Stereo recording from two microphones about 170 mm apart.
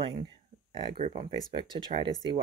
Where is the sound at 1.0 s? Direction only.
40° right (ahead or behind).